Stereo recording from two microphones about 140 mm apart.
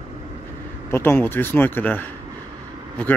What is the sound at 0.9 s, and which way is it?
Speech, 15° left (ahead or behind).